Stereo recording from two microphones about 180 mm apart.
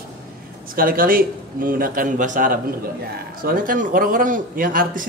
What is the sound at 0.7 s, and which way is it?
A man's voice, 50° right (ahead or behind).